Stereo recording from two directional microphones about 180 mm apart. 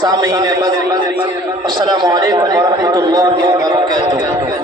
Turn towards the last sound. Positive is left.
turn(degrees=-20)  # may be behind; listen again after turning